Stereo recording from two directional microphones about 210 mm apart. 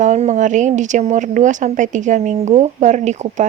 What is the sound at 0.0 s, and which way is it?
Speech, 35° right (ahead or behind).